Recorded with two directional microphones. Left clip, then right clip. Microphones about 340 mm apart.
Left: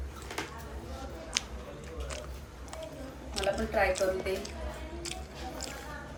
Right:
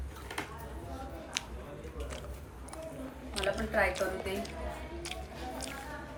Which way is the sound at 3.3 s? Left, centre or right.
Centre.